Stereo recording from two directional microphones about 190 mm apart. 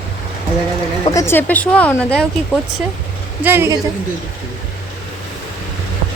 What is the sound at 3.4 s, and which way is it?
Speech, 10° right (ahead or behind).